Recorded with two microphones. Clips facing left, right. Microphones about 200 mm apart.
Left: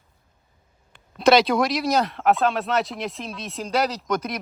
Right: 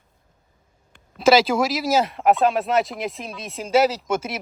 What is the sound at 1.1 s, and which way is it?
Speech, centre (ahead or behind).